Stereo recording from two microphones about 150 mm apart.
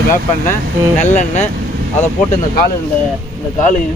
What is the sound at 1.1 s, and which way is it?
Speech, 50° left (ahead or behind).